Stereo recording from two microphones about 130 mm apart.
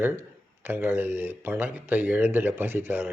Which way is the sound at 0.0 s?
15° right (ahead or behind).